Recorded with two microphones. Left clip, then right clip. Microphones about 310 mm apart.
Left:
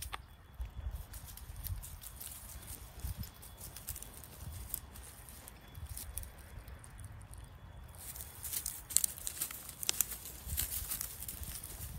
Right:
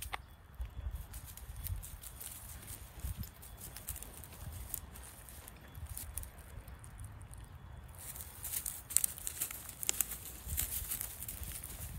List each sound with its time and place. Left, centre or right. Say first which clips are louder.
0.1 s clip-clop: right 3 dB; centre
8.6 s crumpling: left 1 dB; centre